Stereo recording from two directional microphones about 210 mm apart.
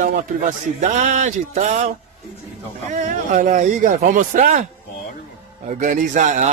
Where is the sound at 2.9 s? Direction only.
35° right (ahead or behind).